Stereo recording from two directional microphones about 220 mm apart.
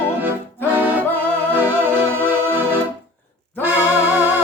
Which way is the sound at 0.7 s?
5° right (ahead or behind).